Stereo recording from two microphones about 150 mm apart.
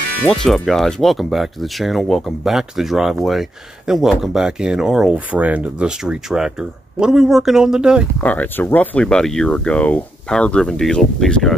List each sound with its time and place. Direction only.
0.3 s speech: centre (ahead or behind)
8.2 s speech: 10° left (ahead or behind)